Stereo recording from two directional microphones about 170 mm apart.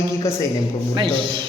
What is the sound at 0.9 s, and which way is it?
Speech, 30° right (ahead or behind).